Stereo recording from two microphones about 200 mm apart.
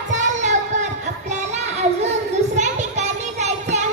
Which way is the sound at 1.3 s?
35° right (ahead or behind).